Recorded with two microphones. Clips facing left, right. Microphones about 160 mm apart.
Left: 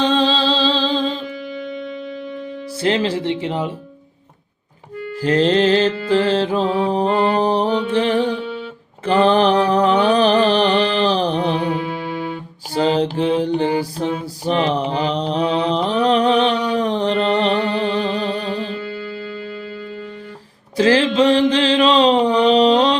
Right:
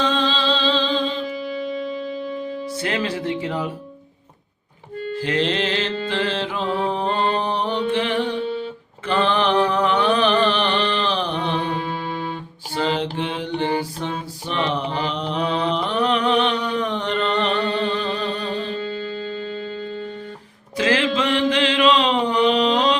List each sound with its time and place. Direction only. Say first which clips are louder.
0.0 s music: left 4 dB; 35° left (ahead or behind)
1.5 s music: right 2 dB; centre (ahead or behind)
2.8 s speech: left 7 dB; 30° left (ahead or behind)
5.1 s music: left 7 dB; 40° left (ahead or behind)
9.0 s mantra: left 6 dB; 40° left (ahead or behind)
12.7 s mantra: left 5 dB; 35° left (ahead or behind)
20.7 s mantra: left 6 dB; 35° left (ahead or behind)